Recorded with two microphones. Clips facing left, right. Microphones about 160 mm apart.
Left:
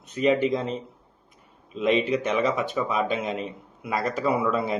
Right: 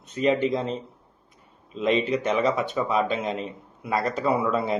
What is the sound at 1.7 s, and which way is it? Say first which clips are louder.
Speech: left 1 dB; 35° right (ahead or behind).